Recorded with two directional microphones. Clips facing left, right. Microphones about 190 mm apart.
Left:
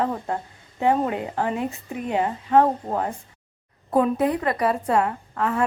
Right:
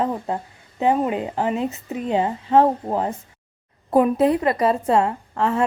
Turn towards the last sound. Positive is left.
turn(degrees=-25)  # may be behind; listen again after turning